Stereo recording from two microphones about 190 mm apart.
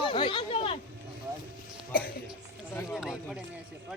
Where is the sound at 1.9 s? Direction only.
50° left (ahead or behind).